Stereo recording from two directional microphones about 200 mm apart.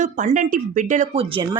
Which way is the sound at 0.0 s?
40° right (ahead or behind).